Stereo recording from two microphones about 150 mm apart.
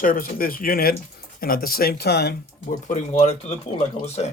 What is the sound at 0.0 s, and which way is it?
Speech, 70° left (ahead or behind).